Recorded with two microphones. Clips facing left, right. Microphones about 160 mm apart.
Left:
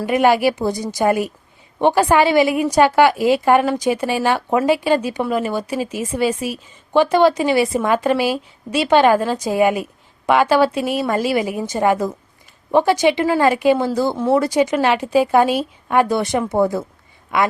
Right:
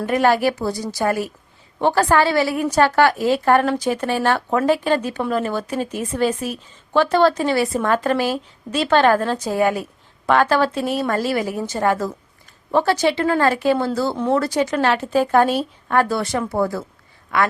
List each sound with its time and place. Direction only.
0.0 s a woman's voice: 15° left (ahead or behind)